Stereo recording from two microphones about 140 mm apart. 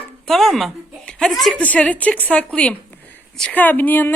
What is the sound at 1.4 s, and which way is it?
Speech, 5° left (ahead or behind).